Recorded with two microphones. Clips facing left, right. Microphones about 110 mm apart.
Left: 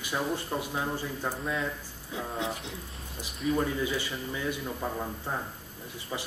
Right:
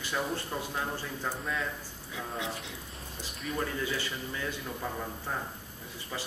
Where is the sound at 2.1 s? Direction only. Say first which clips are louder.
Left 3 dB; 30° left (ahead or behind).